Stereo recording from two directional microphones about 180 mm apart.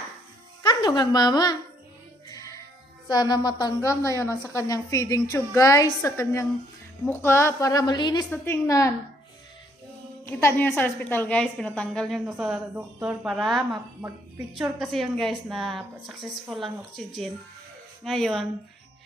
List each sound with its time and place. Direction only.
0.6 s speech: 25° left (ahead or behind)
2.3 s music: 20° left (ahead or behind)
3.1 s a woman's voice: 25° left (ahead or behind)
8.3 s a woman's voice: 10° left (ahead or behind)
10.2 s a woman's voice: 10° left (ahead or behind)